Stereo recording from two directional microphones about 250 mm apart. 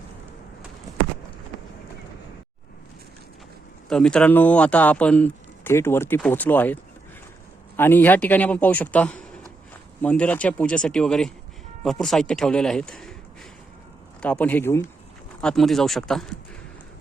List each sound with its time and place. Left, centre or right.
3.8 s speech: centre
7.8 s speech: centre
14.2 s speech: centre